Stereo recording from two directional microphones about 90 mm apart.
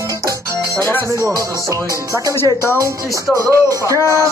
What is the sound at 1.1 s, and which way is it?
Music, 35° right (ahead or behind).